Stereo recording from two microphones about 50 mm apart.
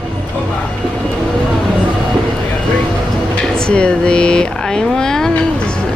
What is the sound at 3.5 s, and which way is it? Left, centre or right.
Speech, centre.